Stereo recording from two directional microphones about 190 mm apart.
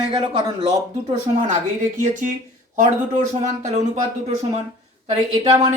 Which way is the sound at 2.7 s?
40° right (ahead or behind).